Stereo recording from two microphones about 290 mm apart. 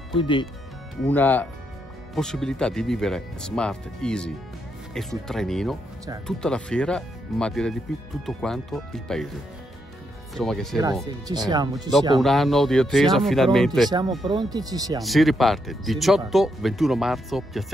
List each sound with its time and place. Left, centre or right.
0.1 s speech: centre
1.0 s speech: centre
10.3 s speech: centre
11.1 s speech: centre
12.2 s speech: centre
13.8 s speech: centre
15.0 s speech: centre